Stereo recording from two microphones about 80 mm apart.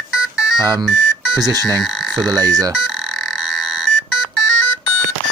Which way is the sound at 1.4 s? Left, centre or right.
Right.